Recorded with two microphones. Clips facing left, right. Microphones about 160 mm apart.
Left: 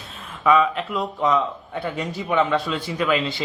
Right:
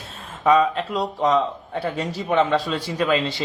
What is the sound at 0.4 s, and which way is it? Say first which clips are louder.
A man's voice: right 1 dB; 35° right (ahead or behind).